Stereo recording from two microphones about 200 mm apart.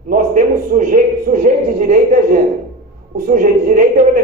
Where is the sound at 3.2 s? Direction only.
45° right (ahead or behind).